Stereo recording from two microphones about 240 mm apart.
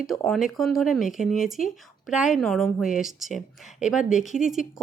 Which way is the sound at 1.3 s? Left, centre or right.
Left.